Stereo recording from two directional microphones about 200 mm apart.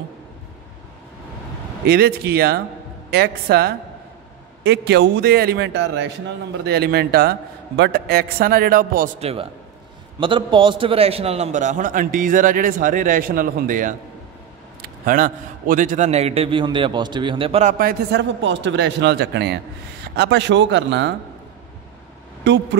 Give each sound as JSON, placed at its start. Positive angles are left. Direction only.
{"t": 1.9, "sound": "a man's voice", "side_deg": -50}
{"t": 9.2, "sound": "a man's voice", "side_deg": -30}
{"t": 17.7, "sound": "a man's voice", "side_deg": -50}
{"t": 22.4, "sound": "speech", "side_deg": -60}